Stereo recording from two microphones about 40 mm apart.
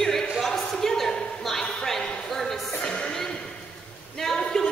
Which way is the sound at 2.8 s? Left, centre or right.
Centre.